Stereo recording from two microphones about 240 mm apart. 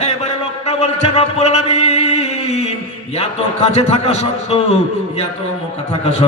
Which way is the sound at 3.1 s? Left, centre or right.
Left.